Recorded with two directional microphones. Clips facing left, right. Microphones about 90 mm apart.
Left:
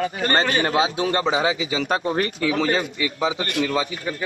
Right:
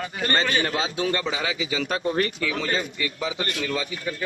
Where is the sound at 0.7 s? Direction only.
20° left (ahead or behind).